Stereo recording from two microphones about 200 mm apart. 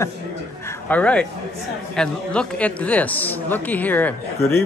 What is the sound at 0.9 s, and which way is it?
Speech, 5° left (ahead or behind).